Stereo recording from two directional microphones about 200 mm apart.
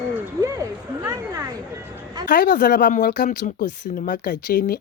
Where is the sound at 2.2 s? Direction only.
45° left (ahead or behind).